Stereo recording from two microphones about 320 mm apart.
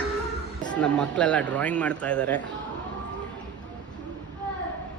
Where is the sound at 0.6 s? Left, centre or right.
Centre.